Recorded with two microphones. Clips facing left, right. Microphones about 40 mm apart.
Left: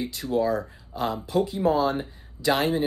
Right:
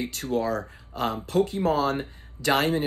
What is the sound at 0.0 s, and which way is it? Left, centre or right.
Speech, right.